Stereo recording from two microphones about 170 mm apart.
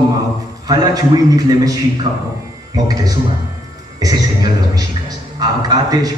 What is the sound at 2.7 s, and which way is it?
Speech, 20° right (ahead or behind).